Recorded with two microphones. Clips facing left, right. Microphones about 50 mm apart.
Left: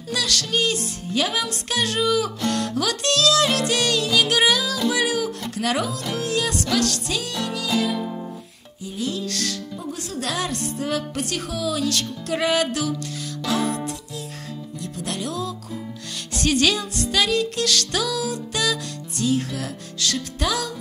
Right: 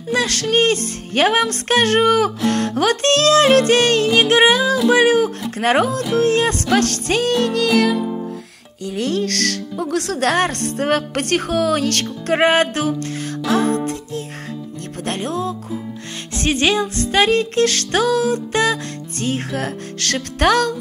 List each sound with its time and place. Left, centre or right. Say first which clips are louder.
0.1 s speech: right 6 dB; right
4.8 s music: right 9 dB; right
5.6 s speech: right 8 dB; right
8.0 s music: right 6 dB; centre
8.8 s speech: right 7 dB; right
13.5 s music: right 6 dB; right
16.3 s speech: right 3 dB; right